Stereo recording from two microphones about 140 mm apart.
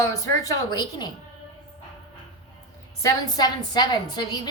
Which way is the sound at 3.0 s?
30° left (ahead or behind).